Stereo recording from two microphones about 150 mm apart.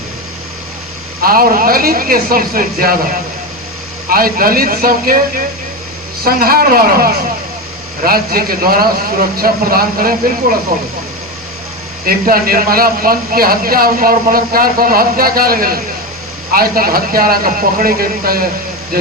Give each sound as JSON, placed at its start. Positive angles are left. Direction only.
{"t": 1.2, "sound": "speech", "side_deg": -75}
{"t": 4.1, "sound": "speech", "side_deg": -75}
{"t": 6.2, "sound": "speech", "side_deg": -80}
{"t": 12.0, "sound": "speech", "side_deg": -75}